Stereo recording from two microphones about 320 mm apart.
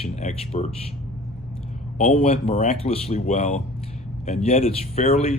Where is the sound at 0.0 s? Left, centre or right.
Centre.